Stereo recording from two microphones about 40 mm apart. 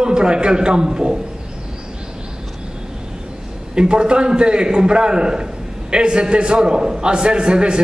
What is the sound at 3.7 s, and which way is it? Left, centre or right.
A man's voice, right.